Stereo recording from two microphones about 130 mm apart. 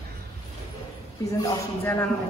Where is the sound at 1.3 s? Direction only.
30° left (ahead or behind).